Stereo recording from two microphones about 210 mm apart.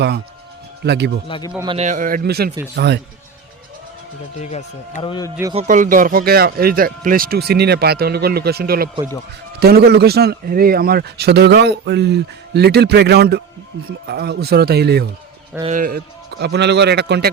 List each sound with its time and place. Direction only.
0.9 s a man's voice: 55° right (ahead or behind)
1.3 s a man's voice: 20° left (ahead or behind)
1.6 s a man's voice: 30° right (ahead or behind); by 3.0 s 55° right (ahead or behind)
4.4 s speech: 30° left (ahead or behind)
5.5 s a man's voice: 40° right (ahead or behind)
15.6 s speech: 40° right (ahead or behind)
16.4 s a man's voice: 55° right (ahead or behind)